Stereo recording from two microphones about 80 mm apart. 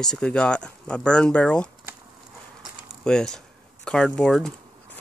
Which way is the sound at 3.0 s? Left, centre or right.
Centre.